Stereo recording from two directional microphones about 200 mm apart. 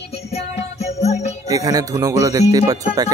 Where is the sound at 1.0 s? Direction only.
35° left (ahead or behind).